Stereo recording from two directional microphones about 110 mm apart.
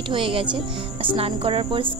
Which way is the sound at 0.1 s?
50° right (ahead or behind).